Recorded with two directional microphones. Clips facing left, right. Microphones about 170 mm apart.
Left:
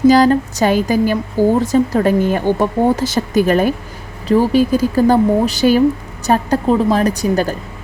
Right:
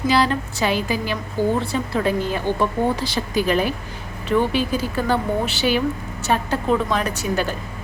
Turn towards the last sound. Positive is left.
turn(degrees=40)  # may be behind; listen again after turning